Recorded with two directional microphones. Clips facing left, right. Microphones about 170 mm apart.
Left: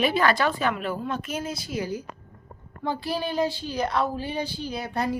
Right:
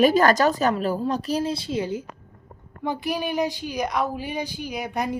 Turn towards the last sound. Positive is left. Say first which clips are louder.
# even
turn(degrees=-15)  # may be behind; listen again after turning